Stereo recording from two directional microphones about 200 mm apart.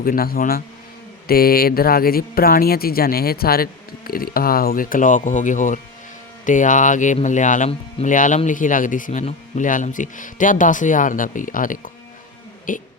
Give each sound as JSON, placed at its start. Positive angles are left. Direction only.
{"t": 0.0, "sound": "speech", "side_deg": 45}